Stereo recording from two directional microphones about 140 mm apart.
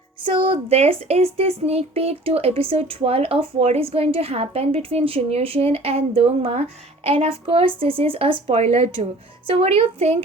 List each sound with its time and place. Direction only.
0.3 s a woman's voice: 40° right (ahead or behind)